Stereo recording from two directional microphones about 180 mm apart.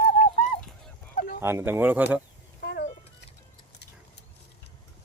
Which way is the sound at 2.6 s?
65° left (ahead or behind).